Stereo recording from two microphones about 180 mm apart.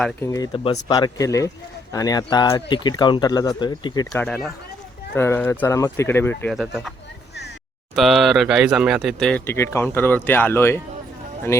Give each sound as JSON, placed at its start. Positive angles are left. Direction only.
{"t": 0.0, "sound": "speech", "side_deg": 15}
{"t": 4.1, "sound": "speech", "side_deg": 0}
{"t": 6.5, "sound": "speech", "side_deg": 0}
{"t": 7.9, "sound": "speech", "side_deg": 0}
{"t": 9.5, "sound": "speech", "side_deg": 15}